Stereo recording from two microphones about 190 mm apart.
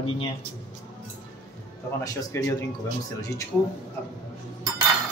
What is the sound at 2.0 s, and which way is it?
Speech, 15° left (ahead or behind).